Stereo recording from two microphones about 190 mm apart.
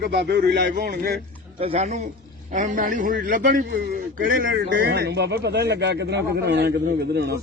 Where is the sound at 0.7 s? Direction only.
50° right (ahead or behind).